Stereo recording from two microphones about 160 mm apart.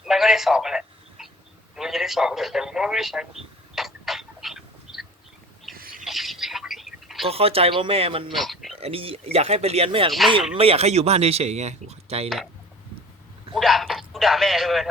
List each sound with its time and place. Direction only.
0.0 s a sound: centre (ahead or behind)
1.7 s speech: centre (ahead or behind)
3.8 s a sound: centre (ahead or behind)
5.7 s bird: 65° right (ahead or behind)
6.1 s telephone: centre (ahead or behind)
7.3 s speech: 35° right (ahead or behind)
8.3 s speech: centre (ahead or behind)
8.8 s speech: 35° right (ahead or behind)
10.1 s speech: centre (ahead or behind)
10.6 s speech: 40° right (ahead or behind)
13.5 s speech: centre (ahead or behind)